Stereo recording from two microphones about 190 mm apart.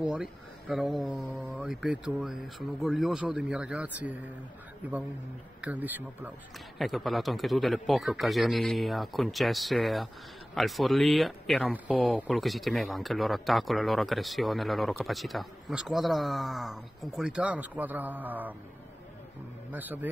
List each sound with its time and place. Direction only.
0.0 s speech: 5° right (ahead or behind)
19.7 s speech: 10° right (ahead or behind)